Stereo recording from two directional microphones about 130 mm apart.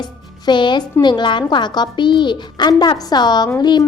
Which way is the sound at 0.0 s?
35° left (ahead or behind).